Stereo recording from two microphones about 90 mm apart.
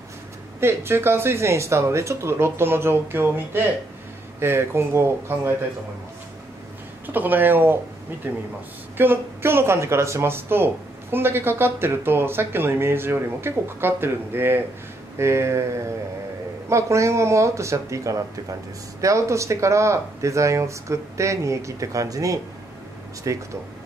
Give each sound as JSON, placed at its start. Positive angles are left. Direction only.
{"t": 0.6, "sound": "speech", "side_deg": -30}
{"t": 7.1, "sound": "speech", "side_deg": -20}
{"t": 16.6, "sound": "speech", "side_deg": -35}